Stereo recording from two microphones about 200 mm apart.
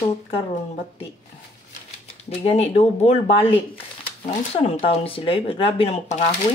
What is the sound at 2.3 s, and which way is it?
A woman's voice, 30° left (ahead or behind).